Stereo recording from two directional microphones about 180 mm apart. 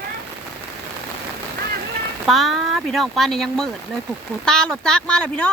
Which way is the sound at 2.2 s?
Centre (ahead or behind).